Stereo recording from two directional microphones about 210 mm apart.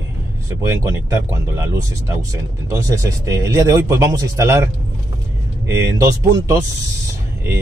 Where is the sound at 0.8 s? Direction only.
15° right (ahead or behind).